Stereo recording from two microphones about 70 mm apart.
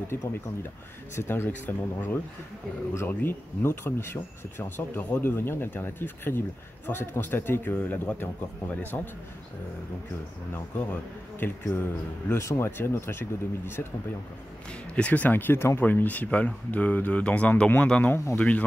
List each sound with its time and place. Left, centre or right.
0.1 s speech: left
3.6 s speech: left
10.9 s speech: left
12.4 s speech: left
14.7 s speech: centre; by 15.8 s left
15.8 s speech: left
17.8 s speech: centre
18.1 s speech: left